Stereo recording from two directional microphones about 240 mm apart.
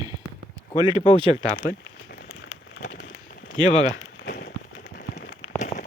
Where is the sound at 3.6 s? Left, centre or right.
Left.